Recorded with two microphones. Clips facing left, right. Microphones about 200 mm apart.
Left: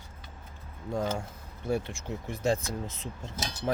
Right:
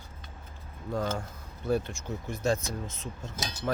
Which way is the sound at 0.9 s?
25° left (ahead or behind).